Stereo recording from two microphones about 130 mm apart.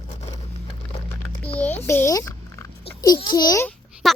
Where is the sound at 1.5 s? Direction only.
15° left (ahead or behind).